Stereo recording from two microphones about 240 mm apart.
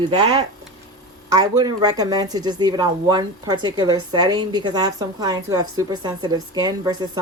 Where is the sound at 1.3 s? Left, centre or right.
Centre.